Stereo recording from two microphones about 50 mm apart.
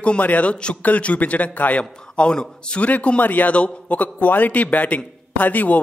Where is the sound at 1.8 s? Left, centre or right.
Left.